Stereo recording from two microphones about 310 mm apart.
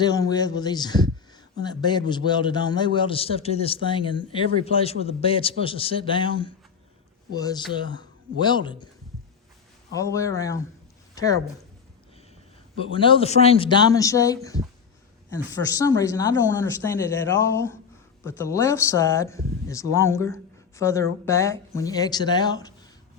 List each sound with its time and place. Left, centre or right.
0.0 s a man's voice: centre
9.9 s a man's voice: centre
12.9 s a man's voice: centre
15.7 s a man's voice: centre